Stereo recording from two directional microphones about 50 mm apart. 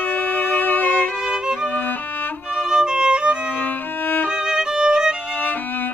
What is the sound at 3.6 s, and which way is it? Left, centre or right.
Music, left.